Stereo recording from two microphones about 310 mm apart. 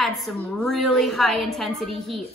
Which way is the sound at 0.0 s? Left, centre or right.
Centre.